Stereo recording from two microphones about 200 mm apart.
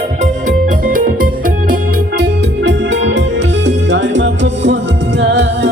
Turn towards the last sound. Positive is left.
turn(degrees=-60)  # may be behind; listen again after turning